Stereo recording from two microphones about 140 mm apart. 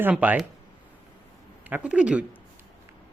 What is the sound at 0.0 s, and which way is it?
Speech, 10° right (ahead or behind).